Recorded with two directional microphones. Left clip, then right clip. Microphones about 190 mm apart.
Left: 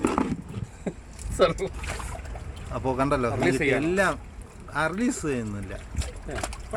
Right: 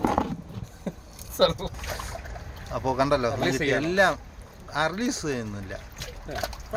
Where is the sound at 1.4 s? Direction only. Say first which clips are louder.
Even; 15° right (ahead or behind).